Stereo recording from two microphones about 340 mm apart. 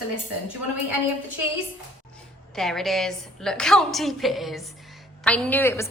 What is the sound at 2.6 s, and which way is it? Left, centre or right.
A woman's voice, centre.